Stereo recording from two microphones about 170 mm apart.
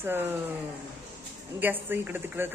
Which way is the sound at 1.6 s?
10° right (ahead or behind).